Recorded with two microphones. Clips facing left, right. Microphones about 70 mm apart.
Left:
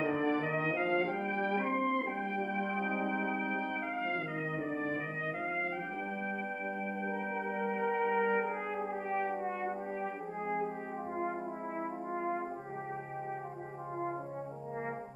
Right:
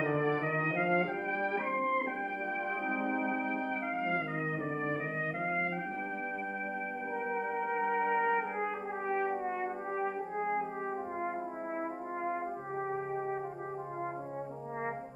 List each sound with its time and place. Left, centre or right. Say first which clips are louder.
0.0 s brass instrument: right 1 dB; centre
0.7 s brass instrument: right 1 dB; centre
1.5 s organ: left 1 dB; right
2.5 s music: even; centre
4.7 s brass instrument: right 1 dB; centre
7.5 s music: even; right
9.2 s brass instrument: right 2 dB; centre